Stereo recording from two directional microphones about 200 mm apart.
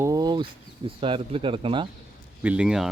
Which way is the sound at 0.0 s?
20° right (ahead or behind).